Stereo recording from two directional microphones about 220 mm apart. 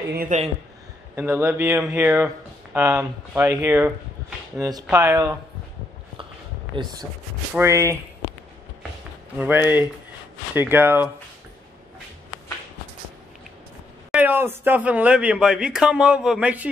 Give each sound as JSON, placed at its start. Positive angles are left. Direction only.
{"t": 0.1, "sound": "speech", "side_deg": -40}
{"t": 1.1, "sound": "speech", "side_deg": -10}
{"t": 6.7, "sound": "speech", "side_deg": -20}
{"t": 9.4, "sound": "speech", "side_deg": -10}
{"t": 14.1, "sound": "speech", "side_deg": -10}